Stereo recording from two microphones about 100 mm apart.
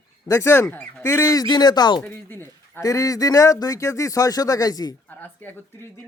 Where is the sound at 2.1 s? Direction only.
20° left (ahead or behind).